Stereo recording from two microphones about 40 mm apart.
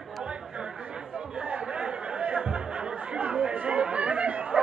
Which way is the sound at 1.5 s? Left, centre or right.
Right.